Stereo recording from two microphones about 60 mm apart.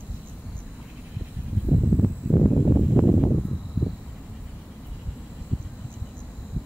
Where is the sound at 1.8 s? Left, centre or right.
Centre.